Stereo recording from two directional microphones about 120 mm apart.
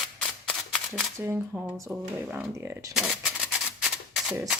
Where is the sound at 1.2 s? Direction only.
20° right (ahead or behind).